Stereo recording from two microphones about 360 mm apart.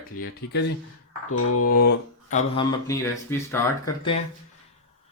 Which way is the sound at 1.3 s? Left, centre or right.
Left.